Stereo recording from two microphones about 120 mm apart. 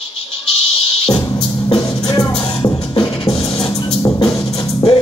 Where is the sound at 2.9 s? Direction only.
45° left (ahead or behind).